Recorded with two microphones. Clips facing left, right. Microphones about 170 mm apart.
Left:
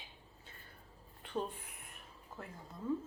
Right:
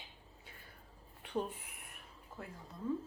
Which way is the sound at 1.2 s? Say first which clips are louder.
Right 1 dB; 15° right (ahead or behind).